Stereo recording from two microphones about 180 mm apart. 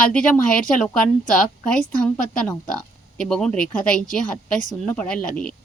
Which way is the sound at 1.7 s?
5° left (ahead or behind).